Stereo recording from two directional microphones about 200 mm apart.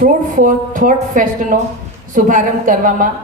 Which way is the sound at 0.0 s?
40° right (ahead or behind).